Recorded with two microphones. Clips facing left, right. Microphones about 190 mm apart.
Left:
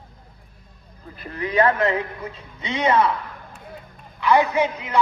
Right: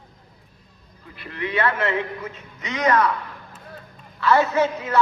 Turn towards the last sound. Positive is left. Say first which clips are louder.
# right 1 dB
turn(degrees=15)  # may be behind; listen again after turning